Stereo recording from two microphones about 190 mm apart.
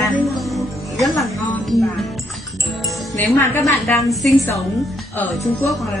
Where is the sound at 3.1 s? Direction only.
10° left (ahead or behind).